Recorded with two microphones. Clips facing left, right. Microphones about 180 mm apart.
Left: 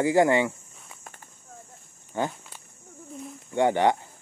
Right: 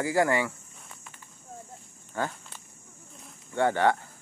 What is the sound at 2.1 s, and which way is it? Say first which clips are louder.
Walk: left 3 dB; 20° left (ahead or behind).